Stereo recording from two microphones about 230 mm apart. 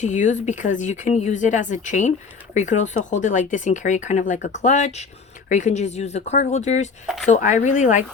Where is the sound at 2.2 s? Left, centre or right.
Centre.